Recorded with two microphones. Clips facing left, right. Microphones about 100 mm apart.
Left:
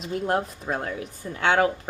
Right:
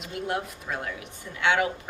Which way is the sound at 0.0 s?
35° left (ahead or behind).